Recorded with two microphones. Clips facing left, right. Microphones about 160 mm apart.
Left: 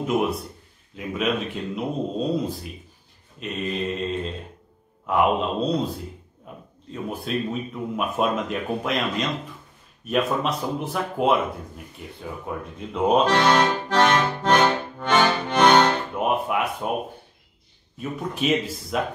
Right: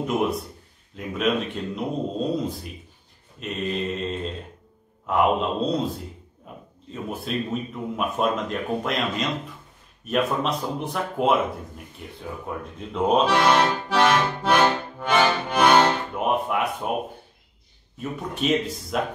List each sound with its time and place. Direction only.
0.0 s speech: centre (ahead or behind)
6.5 s a sound: centre (ahead or behind)
6.9 s speech: centre (ahead or behind)
12.2 s accordion: centre (ahead or behind)
17.9 s speech: centre (ahead or behind)